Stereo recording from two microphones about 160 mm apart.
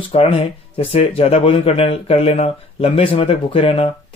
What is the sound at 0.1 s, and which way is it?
Speech, 40° left (ahead or behind).